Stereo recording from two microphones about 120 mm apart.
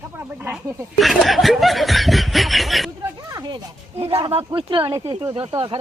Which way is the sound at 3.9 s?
55° right (ahead or behind).